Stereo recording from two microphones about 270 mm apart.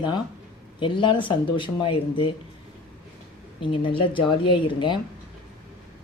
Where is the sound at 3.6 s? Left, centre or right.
Centre.